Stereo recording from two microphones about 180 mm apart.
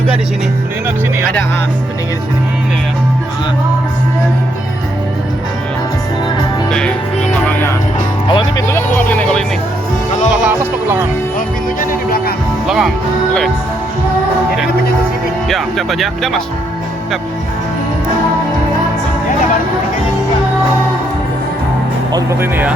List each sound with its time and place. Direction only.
6.7 s music: 5° left (ahead or behind)
8.3 s music: 25° left (ahead or behind)
10.4 s music: 10° right (ahead or behind)
11.3 s music: 50° left (ahead or behind)
12.6 s music: centre (ahead or behind)
15.4 s speech: centre (ahead or behind)
22.1 s speech: 15° right (ahead or behind)